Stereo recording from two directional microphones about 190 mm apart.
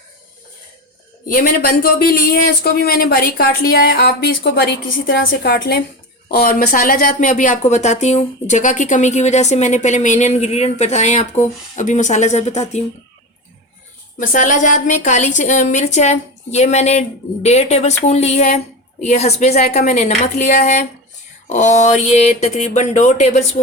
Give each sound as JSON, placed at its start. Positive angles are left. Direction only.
{"t": 1.3, "sound": "a woman's voice", "side_deg": 50}
{"t": 14.2, "sound": "a woman's voice", "side_deg": 40}